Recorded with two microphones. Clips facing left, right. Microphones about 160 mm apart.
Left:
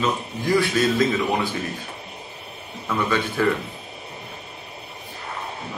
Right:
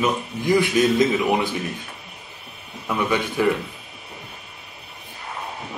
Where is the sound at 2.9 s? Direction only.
15° right (ahead or behind).